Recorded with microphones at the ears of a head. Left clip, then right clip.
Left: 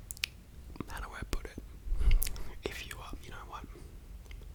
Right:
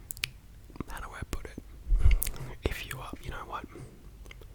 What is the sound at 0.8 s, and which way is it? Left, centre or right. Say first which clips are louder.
Whispering: right 2 dB; centre.